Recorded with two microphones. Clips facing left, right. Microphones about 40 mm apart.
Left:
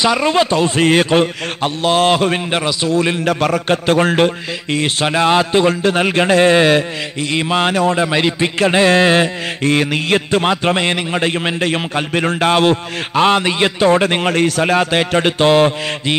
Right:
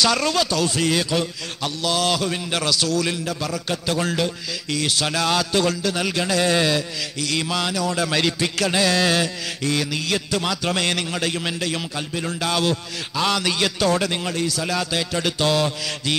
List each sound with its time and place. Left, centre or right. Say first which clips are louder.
0.0 s music: left 6 dB; left
2.6 s a man's voice: left 3 dB; left
3.3 s a man's voice: left 11 dB; left
4.7 s music: left 7 dB; left